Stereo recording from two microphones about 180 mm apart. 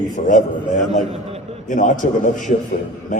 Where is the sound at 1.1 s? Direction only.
35° right (ahead or behind).